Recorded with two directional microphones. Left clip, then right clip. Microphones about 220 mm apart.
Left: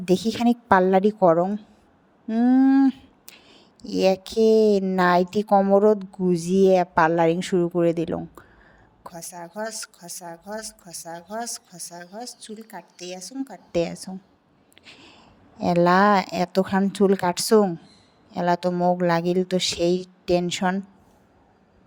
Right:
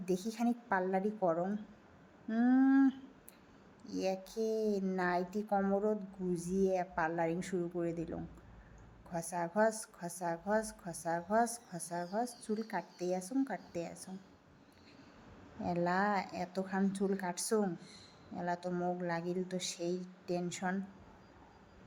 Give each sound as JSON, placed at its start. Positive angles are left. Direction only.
{"t": 0.0, "sound": "a woman's voice", "side_deg": 40}
{"t": 2.2, "sound": "a sound", "side_deg": 30}
{"t": 3.8, "sound": "a woman's voice", "side_deg": 40}
{"t": 9.3, "sound": "a woman's voice", "side_deg": 0}
{"t": 9.6, "sound": "a woman's voice", "side_deg": 40}
{"t": 10.2, "sound": "a woman's voice", "side_deg": 0}
{"t": 12.5, "sound": "a woman's voice", "side_deg": 0}
{"t": 13.0, "sound": "a woman's voice", "side_deg": 40}
{"t": 15.6, "sound": "a woman's voice", "side_deg": 40}